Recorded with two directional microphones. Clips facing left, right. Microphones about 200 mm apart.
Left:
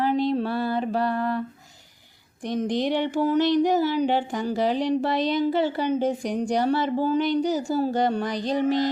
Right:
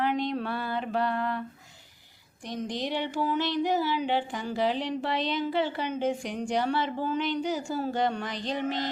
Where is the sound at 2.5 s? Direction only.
55° left (ahead or behind).